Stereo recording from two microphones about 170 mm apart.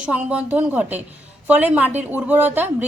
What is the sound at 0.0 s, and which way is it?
A woman's voice, 5° right (ahead or behind).